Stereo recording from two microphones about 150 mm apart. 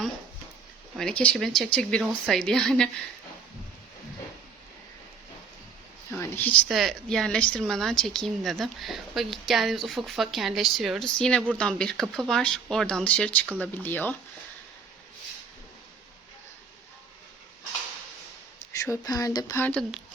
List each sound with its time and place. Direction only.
0.9 s speech: 5° left (ahead or behind)
6.1 s speech: 15° left (ahead or behind)
6.7 s speech: centre (ahead or behind)
18.7 s speech: 20° left (ahead or behind)
19.6 s speech: 5° left (ahead or behind)